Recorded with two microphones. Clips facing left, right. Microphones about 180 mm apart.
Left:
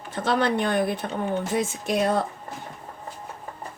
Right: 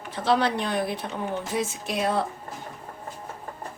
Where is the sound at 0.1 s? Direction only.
50° left (ahead or behind).